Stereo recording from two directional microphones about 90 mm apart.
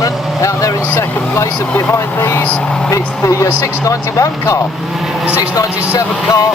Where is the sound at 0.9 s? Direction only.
20° left (ahead or behind).